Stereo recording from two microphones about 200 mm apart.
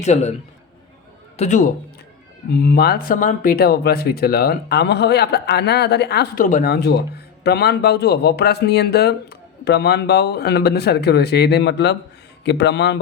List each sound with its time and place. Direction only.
0.0 s a man's voice: 35° left (ahead or behind)
1.4 s a man's voice: 40° left (ahead or behind)
2.5 s speech: 50° left (ahead or behind)
6.4 s speech: 45° left (ahead or behind); by 13.0 s 60° left (ahead or behind)